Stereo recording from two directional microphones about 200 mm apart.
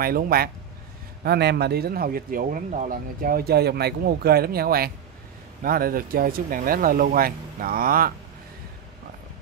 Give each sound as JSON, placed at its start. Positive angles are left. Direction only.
{"t": 0.0, "sound": "speech", "side_deg": -50}